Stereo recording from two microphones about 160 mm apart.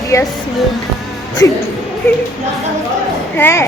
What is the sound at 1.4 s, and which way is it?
Speech, 20° left (ahead or behind).